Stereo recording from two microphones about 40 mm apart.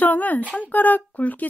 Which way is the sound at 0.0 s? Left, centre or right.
Left.